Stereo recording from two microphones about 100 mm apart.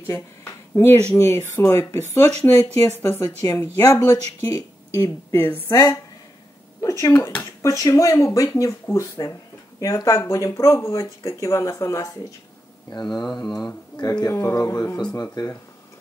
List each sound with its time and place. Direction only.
0.0 s a sound: 25° left (ahead or behind)
1.1 s speech: 30° left (ahead or behind)
5.4 s speech: 20° left (ahead or behind)
5.7 s speech: 35° left (ahead or behind)
13.0 s speech: 5° left (ahead or behind)
13.9 s speech: 40° left (ahead or behind)
15.4 s speech: 45° left (ahead or behind)